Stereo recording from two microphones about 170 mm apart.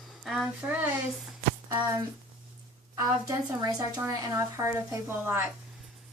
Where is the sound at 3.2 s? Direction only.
20° right (ahead or behind).